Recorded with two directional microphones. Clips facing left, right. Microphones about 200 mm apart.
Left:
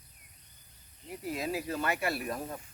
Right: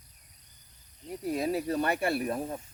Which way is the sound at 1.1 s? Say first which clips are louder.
Right 5 dB; centre (ahead or behind).